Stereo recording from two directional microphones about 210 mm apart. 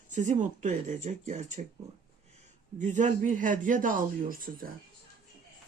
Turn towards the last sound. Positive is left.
turn(degrees=-40)  # may be behind; listen again after turning